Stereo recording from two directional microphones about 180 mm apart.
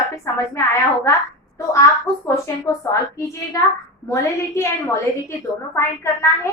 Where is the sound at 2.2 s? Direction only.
15° left (ahead or behind).